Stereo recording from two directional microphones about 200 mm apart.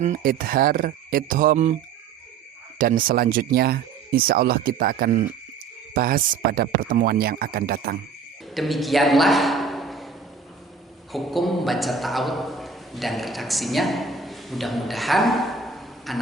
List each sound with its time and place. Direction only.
0.0 s speech: 40° right (ahead or behind)
2.7 s speech: 45° right (ahead or behind)
8.5 s a man's voice: centre (ahead or behind)
11.1 s a man's voice: centre (ahead or behind)